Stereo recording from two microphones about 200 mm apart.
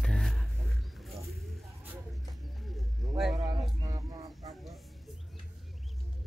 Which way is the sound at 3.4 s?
20° right (ahead or behind).